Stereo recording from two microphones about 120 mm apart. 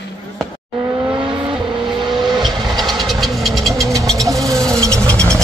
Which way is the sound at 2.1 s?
5° right (ahead or behind).